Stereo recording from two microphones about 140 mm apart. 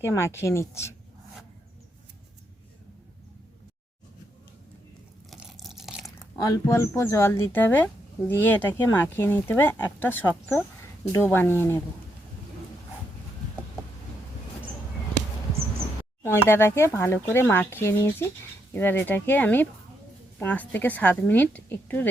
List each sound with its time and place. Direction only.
0.0 s speech: 20° left (ahead or behind)
5.3 s a sound: centre (ahead or behind)
6.3 s speech: 25° left (ahead or behind)
16.2 s speech: 15° left (ahead or behind)